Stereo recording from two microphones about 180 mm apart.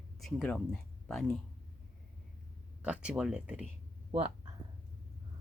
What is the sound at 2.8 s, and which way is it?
Speech, 5° right (ahead or behind).